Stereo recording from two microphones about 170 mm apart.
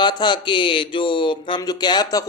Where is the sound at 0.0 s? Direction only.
25° left (ahead or behind).